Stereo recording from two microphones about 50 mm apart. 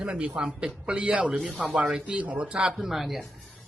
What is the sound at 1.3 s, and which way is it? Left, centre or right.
Speech, centre.